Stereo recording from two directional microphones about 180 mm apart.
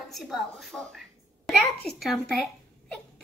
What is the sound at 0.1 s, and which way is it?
A child's voice, centre (ahead or behind).